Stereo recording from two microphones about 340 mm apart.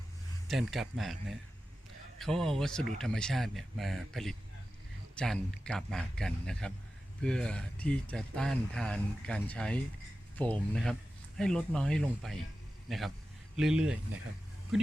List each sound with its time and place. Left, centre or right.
0.4 s speech: centre
2.1 s speech: centre